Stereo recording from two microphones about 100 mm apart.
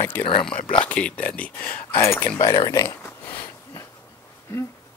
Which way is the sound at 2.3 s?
40° left (ahead or behind).